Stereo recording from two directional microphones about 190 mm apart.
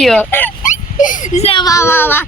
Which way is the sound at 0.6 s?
40° left (ahead or behind).